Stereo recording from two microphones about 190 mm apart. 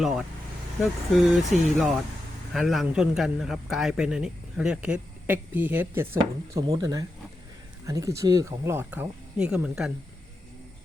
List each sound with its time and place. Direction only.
0.0 s a man's voice: centre (ahead or behind)